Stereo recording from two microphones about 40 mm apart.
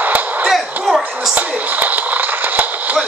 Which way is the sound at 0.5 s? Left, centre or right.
Centre.